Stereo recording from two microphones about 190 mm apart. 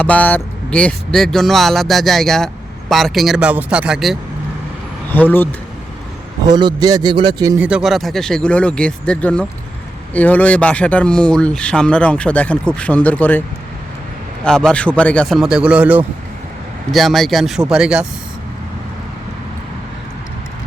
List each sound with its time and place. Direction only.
0.0 s speech: 10° left (ahead or behind)
5.1 s speech: 10° left (ahead or behind)
6.5 s a man's voice: 20° right (ahead or behind)
7.6 s speech: 5° right (ahead or behind)
14.4 s speech: 5° left (ahead or behind)